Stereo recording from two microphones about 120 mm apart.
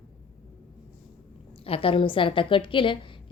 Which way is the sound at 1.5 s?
55° left (ahead or behind).